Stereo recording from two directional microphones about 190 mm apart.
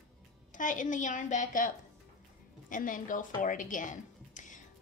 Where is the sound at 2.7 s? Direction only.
45° left (ahead or behind).